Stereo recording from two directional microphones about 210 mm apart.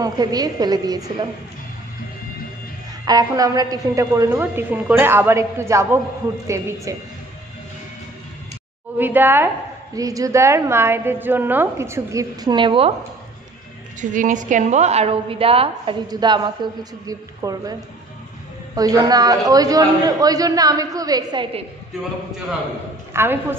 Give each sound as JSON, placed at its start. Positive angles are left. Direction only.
{"t": 0.0, "sound": "a woman's voice", "side_deg": -20}
{"t": 3.1, "sound": "a woman's voice", "side_deg": -15}
{"t": 8.9, "sound": "a woman's voice", "side_deg": -10}
{"t": 14.1, "sound": "a woman's voice", "side_deg": -35}
{"t": 18.8, "sound": "a woman's voice", "side_deg": -15}
{"t": 23.1, "sound": "a woman's voice", "side_deg": -10}